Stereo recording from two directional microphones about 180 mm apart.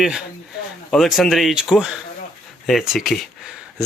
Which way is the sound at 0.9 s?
Centre (ahead or behind).